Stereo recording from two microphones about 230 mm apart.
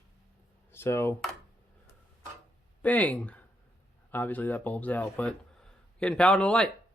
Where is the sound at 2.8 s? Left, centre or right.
Centre.